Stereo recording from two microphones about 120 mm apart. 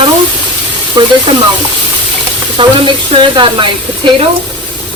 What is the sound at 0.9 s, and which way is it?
Speech, 40° right (ahead or behind).